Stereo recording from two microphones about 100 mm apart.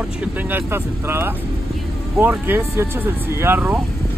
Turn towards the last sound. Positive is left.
turn(degrees=-20)  # may be behind; listen again after turning